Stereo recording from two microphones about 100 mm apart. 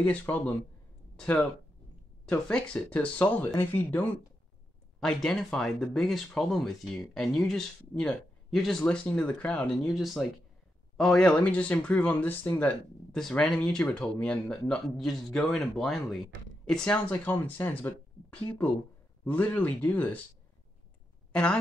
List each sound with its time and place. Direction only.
0.0 s speech: 15° left (ahead or behind)
5.0 s speech: 5° left (ahead or behind)
8.8 s speech: 15° left (ahead or behind)
21.3 s speech: 10° left (ahead or behind)